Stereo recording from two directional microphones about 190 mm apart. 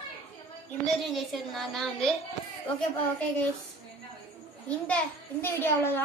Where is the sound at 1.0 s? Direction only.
Centre (ahead or behind).